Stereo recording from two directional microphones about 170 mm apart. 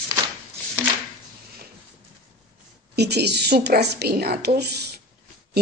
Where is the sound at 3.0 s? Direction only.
75° right (ahead or behind).